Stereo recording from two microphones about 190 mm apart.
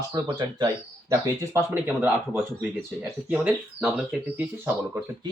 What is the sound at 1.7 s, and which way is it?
Speech, 10° right (ahead or behind).